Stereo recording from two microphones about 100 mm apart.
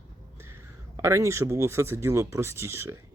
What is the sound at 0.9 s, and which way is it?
Speech, 30° right (ahead or behind).